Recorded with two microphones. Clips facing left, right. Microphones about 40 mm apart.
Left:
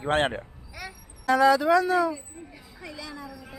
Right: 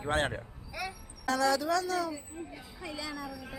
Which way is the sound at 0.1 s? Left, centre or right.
Left.